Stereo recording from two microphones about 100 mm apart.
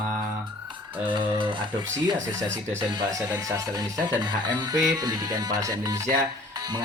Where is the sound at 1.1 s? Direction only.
55° right (ahead or behind).